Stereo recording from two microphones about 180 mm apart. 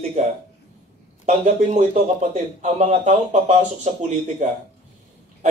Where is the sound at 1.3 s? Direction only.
35° right (ahead or behind).